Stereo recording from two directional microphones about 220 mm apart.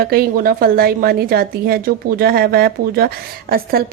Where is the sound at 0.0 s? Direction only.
45° right (ahead or behind).